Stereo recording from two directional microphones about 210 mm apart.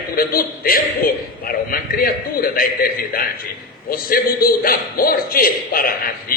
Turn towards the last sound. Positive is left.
turn(degrees=45)  # may be behind; listen again after turning